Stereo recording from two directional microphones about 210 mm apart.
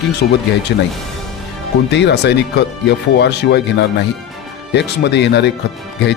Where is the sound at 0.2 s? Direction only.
50° left (ahead or behind).